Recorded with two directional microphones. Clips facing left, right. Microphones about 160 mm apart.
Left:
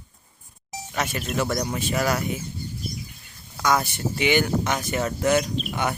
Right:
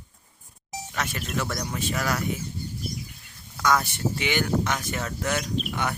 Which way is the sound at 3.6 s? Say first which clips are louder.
Left 1 dB; 10° left (ahead or behind).